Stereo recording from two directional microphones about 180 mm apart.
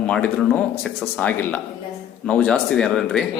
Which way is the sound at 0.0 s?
5° left (ahead or behind).